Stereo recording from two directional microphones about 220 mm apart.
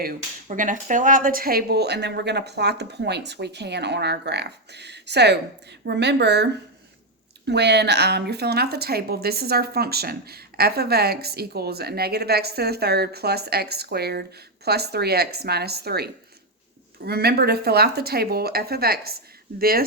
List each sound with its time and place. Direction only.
0.0 s a woman's voice: 35° right (ahead or behind)
17.1 s a woman's voice: 45° right (ahead or behind)